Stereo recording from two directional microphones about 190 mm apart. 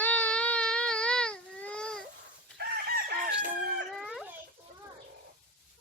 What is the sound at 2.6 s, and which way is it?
Chicken, 55° right (ahead or behind).